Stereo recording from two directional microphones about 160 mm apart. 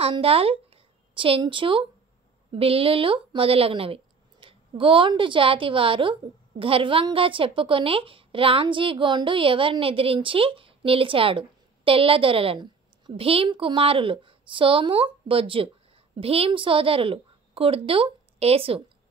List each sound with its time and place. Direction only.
0.0 s a woman's voice: 35° right (ahead or behind)